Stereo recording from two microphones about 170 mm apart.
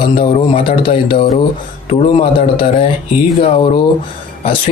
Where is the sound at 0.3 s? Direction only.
35° left (ahead or behind).